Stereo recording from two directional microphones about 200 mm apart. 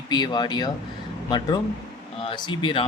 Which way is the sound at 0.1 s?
20° left (ahead or behind).